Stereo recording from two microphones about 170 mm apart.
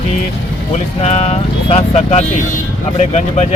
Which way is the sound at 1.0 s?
35° left (ahead or behind).